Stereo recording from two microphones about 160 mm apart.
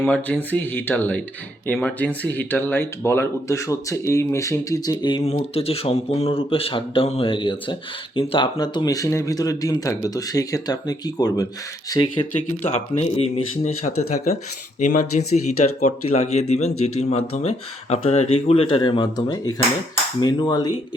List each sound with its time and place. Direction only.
0.0 s speech: 10° left (ahead or behind)
5.2 s speech: 40° left (ahead or behind)
13.0 s speech: 40° left (ahead or behind); by 20.7 s 25° left (ahead or behind)